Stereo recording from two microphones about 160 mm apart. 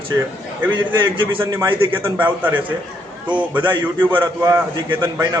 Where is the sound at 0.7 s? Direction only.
30° right (ahead or behind).